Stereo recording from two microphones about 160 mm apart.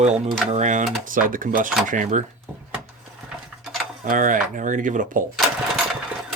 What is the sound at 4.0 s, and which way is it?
Speech, 55° right (ahead or behind).